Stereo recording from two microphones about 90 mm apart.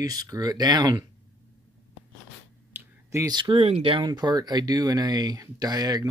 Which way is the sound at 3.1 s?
45° right (ahead or behind).